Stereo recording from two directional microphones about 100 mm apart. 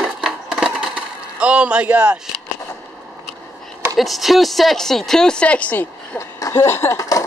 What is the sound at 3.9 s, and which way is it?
Speech, centre (ahead or behind).